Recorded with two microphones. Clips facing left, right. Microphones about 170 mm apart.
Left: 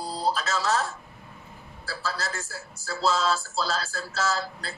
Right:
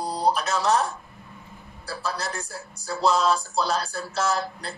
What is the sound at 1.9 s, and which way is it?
Speech, 20° right (ahead or behind).